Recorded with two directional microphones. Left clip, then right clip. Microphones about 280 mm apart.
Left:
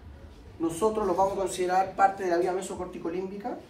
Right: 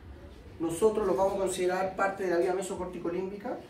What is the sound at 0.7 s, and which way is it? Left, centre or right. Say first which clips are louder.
A man's voice: even; centre.